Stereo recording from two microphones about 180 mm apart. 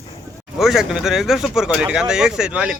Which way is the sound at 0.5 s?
Centre (ahead or behind).